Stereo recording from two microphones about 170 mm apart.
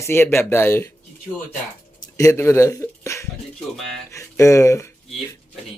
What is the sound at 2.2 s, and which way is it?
A man's voice, 15° left (ahead or behind).